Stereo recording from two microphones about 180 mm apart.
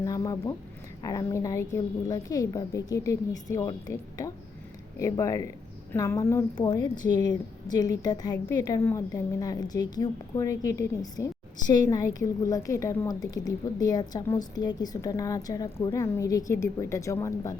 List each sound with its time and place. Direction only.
0.0 s a woman's voice: 20° left (ahead or behind)